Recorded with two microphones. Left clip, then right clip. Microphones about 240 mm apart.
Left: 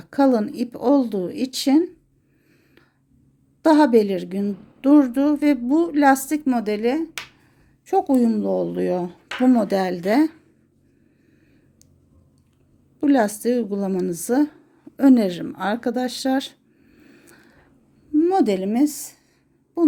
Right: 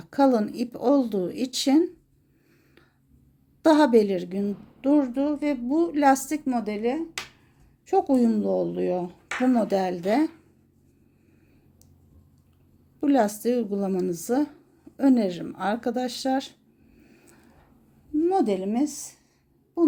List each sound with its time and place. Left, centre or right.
0.0 s speech: centre
3.6 s a woman's voice: centre; by 7.1 s left
7.9 s speech: centre
13.0 s a woman's voice: centre